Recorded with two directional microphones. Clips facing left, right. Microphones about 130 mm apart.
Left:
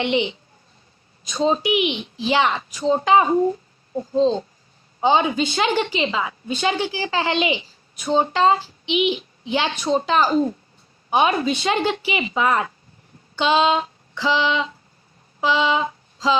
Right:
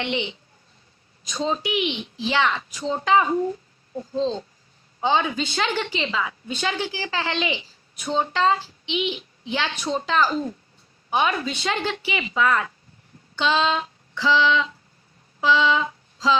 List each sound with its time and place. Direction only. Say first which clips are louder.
0.0 s a woman's voice: left 6 dB; 15° left (ahead or behind)
1.6 s a woman's voice: left 4 dB; 15° left (ahead or behind)
3.9 s a woman's voice: left 6 dB; 15° left (ahead or behind)
13.3 s female singing: left 4 dB; 15° left (ahead or behind)
15.4 s a woman's voice: even; 15° left (ahead or behind)